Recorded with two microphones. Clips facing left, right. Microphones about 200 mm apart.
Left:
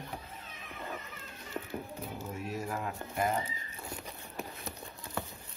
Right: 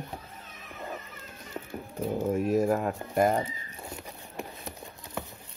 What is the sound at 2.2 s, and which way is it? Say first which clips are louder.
Speech: right 15 dB; 50° right (ahead or behind).